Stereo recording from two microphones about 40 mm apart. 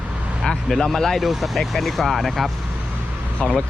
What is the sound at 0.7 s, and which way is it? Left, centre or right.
Speech, centre.